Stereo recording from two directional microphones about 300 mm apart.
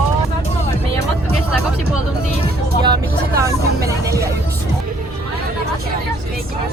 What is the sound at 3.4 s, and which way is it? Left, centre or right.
Vehicle, centre.